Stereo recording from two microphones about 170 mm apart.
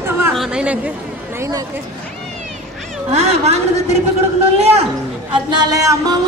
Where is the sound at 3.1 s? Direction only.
40° right (ahead or behind).